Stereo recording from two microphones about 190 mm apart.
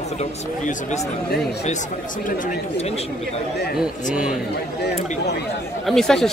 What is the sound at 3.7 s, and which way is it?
Speech, 5° right (ahead or behind).